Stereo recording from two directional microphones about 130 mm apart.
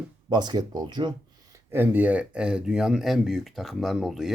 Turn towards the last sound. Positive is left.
turn(degrees=0)  # may be behind; listen again after turning